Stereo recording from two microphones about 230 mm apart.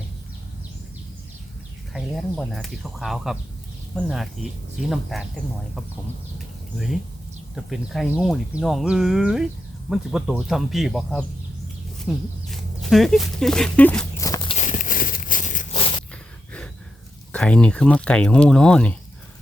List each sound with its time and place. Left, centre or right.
1.9 s speech: centre
14.2 s walk: centre
14.5 s a sound: left
17.3 s speech: centre